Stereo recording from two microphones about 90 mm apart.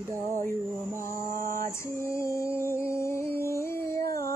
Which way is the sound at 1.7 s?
30° left (ahead or behind).